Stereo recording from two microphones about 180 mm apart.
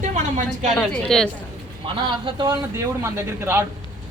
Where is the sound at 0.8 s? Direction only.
5° left (ahead or behind).